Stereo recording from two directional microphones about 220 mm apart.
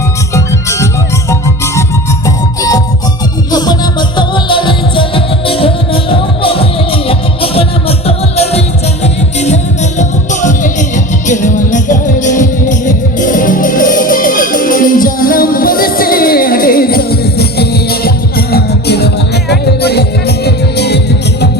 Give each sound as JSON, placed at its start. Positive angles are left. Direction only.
{"t": 0.3, "sound": "music", "side_deg": 15}
{"t": 4.2, "sound": "music", "side_deg": 20}
{"t": 10.0, "sound": "music", "side_deg": 35}